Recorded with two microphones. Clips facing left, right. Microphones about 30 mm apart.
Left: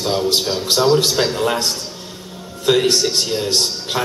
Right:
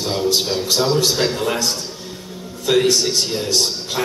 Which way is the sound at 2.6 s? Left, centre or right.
Left.